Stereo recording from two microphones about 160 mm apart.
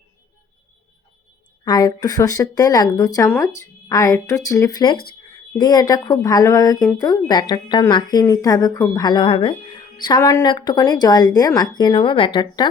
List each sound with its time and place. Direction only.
1.6 s speech: 25° left (ahead or behind)